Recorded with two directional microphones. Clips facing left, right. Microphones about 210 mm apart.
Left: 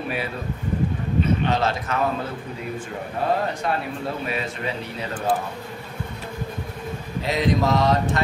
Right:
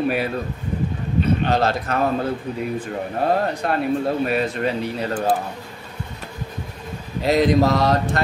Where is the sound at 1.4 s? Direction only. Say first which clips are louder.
Right 3 dB; 35° right (ahead or behind).